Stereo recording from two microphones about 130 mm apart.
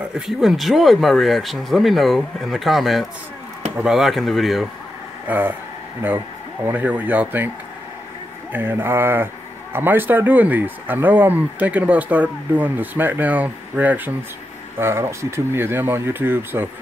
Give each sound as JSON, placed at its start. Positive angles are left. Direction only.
{"t": 0.1, "sound": "speech", "side_deg": 0}
{"t": 5.3, "sound": "speech", "side_deg": -10}
{"t": 6.6, "sound": "speech", "side_deg": -15}